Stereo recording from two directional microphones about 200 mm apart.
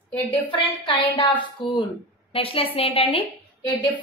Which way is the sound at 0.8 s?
25° left (ahead or behind).